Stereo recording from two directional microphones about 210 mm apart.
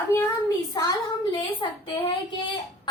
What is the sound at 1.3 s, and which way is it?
Speech, 25° left (ahead or behind).